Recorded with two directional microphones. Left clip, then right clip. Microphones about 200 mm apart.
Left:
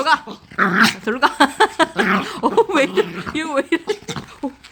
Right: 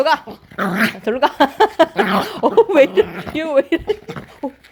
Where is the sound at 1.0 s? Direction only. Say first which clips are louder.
Right 1 dB; 15° right (ahead or behind).